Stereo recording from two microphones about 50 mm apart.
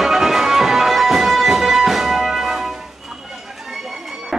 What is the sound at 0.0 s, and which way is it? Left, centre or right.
Music, centre.